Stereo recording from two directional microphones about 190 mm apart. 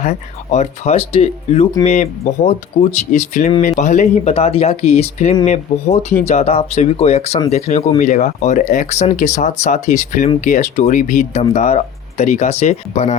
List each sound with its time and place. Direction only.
0.0 s speech: 35° left (ahead or behind)